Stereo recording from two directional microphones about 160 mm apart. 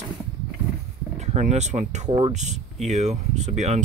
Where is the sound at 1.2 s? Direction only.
45° right (ahead or behind).